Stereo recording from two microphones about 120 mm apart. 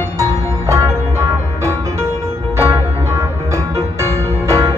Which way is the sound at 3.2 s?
25° right (ahead or behind).